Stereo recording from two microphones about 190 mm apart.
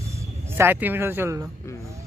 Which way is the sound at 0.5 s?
10° right (ahead or behind).